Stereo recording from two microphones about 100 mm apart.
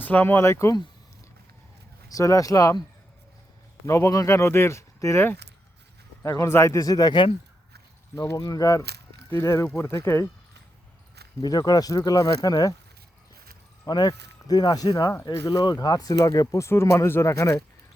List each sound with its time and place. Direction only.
0.0 s speech: 20° left (ahead or behind)
2.0 s speech: 35° left (ahead or behind)
3.8 s speech: 30° left (ahead or behind)
8.1 s speech: 30° left (ahead or behind)
11.3 s speech: 40° left (ahead or behind)
13.8 s speech: 40° left (ahead or behind)